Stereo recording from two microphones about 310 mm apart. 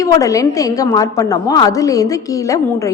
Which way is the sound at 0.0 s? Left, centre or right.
Centre.